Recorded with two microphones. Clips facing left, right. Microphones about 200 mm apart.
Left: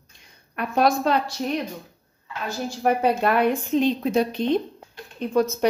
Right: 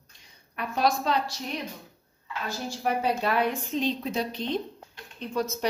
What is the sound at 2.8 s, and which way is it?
Speech, 55° left (ahead or behind).